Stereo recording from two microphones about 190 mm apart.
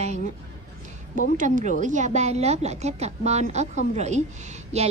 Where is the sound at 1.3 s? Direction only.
45° right (ahead or behind).